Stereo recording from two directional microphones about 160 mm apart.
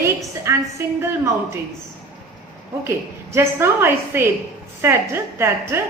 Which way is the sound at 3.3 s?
15° right (ahead or behind).